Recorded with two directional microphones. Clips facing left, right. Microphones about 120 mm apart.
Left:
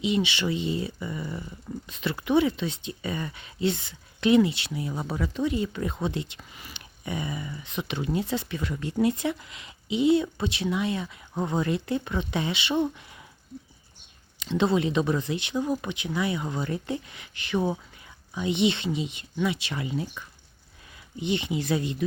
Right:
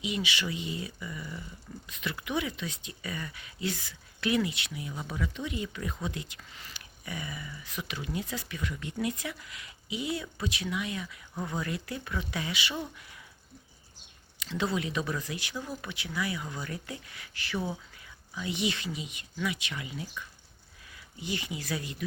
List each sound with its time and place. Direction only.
0.0 s speech: 25° left (ahead or behind)
6.5 s speech: 15° left (ahead or behind)
6.7 s speech: 25° left (ahead or behind)
14.3 s speech: 25° left (ahead or behind)
21.2 s speech: 25° left (ahead or behind)